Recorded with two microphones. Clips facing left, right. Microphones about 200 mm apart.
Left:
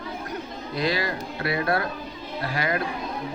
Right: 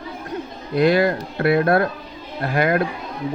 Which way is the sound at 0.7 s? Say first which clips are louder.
Right 10 dB; 55° right (ahead or behind).